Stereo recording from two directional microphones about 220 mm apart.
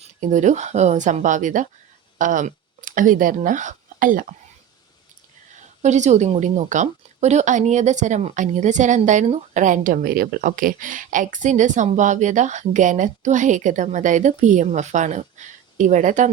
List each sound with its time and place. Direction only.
0.0 s a woman's voice: 35° right (ahead or behind)
5.8 s a woman's voice: 30° right (ahead or behind)